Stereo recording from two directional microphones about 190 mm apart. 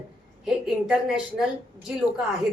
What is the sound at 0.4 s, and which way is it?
A woman's voice, 5° right (ahead or behind).